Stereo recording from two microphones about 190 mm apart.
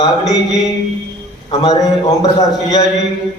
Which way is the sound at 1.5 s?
20° left (ahead or behind).